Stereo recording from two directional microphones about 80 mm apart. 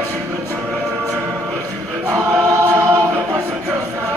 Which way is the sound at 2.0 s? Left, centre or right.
Right.